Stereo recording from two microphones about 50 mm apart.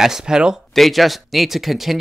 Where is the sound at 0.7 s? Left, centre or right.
Centre.